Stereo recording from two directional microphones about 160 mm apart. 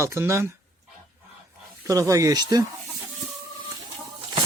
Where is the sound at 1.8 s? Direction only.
20° right (ahead or behind).